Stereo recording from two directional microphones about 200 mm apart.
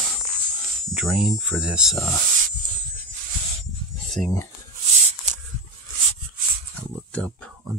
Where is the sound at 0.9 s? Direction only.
5° right (ahead or behind).